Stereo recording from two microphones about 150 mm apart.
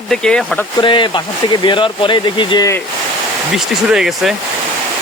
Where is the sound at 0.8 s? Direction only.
30° left (ahead or behind).